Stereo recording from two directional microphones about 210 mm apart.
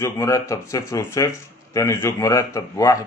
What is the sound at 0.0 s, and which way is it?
Speech, 15° left (ahead or behind).